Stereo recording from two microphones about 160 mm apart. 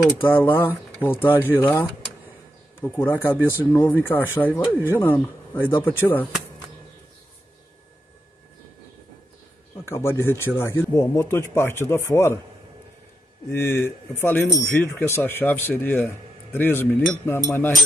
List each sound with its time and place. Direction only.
0.0 s speech: 10° left (ahead or behind)
9.8 s speech: 15° left (ahead or behind)
13.5 s speech: 15° left (ahead or behind)